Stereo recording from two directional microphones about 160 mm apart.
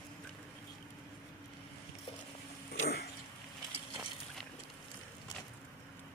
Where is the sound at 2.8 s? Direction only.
75° left (ahead or behind).